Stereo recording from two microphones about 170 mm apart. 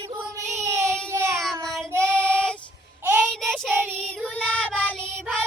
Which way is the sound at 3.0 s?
10° right (ahead or behind).